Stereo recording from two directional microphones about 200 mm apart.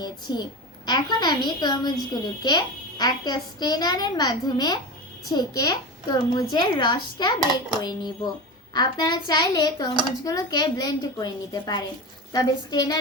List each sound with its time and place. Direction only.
0.0 s a child's voice: 20° left (ahead or behind)